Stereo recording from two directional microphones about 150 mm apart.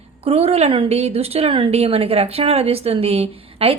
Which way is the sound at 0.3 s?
40° right (ahead or behind).